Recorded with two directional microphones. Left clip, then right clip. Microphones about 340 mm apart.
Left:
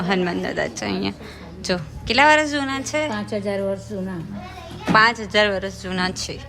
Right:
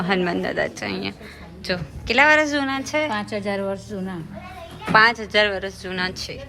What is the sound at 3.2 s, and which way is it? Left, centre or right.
Speech, right.